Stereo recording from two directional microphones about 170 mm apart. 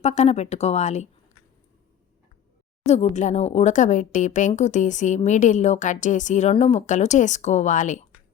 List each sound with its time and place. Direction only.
0.0 s speech: 40° left (ahead or behind)
2.8 s speech: 40° left (ahead or behind)